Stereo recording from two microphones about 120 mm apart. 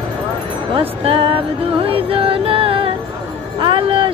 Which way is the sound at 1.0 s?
50° right (ahead or behind).